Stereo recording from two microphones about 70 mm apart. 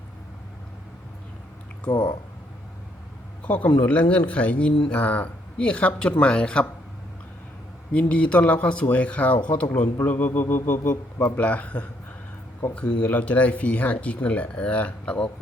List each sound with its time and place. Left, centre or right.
1.9 s speech: left
3.4 s speech: left
7.9 s speech: centre